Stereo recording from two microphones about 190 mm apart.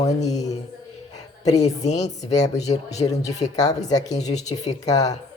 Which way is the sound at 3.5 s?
20° left (ahead or behind).